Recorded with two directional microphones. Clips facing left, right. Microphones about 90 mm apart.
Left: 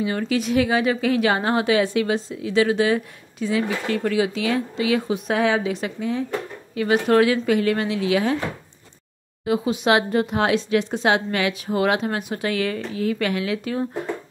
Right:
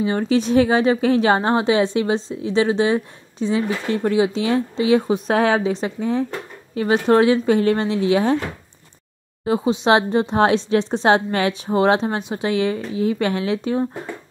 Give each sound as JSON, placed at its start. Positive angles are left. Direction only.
{"t": 0.0, "sound": "a woman's voice", "side_deg": -30}
{"t": 9.4, "sound": "a woman's voice", "side_deg": -30}